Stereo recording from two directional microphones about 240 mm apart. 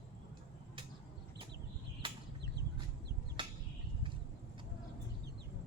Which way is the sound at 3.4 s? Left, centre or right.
Centre.